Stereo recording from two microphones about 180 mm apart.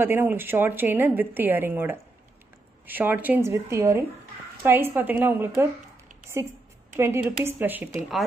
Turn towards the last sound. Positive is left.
turn(degrees=-10)  # may be behind; listen again after turning